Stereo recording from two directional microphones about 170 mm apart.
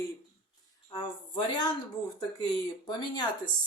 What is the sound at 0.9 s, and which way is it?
Speech, 25° left (ahead or behind).